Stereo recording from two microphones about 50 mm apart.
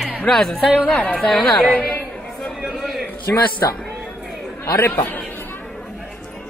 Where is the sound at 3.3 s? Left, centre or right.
Left.